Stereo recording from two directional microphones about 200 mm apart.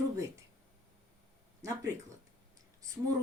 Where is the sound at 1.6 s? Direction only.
15° right (ahead or behind).